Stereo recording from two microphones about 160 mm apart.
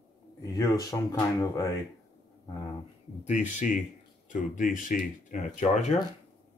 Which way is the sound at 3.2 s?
50° left (ahead or behind).